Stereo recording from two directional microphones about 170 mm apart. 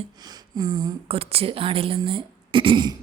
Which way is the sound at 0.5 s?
25° right (ahead or behind).